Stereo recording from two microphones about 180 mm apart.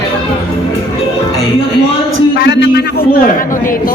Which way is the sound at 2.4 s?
75° left (ahead or behind).